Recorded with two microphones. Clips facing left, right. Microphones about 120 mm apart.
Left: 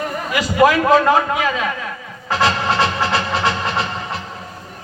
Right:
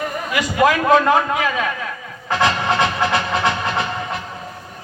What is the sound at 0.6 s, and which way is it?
A man's voice, 25° left (ahead or behind).